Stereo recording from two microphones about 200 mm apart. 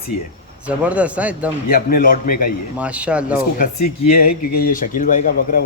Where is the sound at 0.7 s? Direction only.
5° right (ahead or behind).